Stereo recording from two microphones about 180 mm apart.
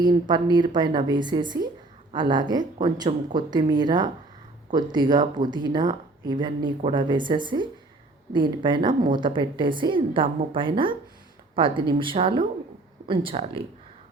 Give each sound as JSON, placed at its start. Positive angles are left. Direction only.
{"t": 0.0, "sound": "speech", "side_deg": -25}
{"t": 8.9, "sound": "speech", "side_deg": -50}
{"t": 9.1, "sound": "speech", "side_deg": -25}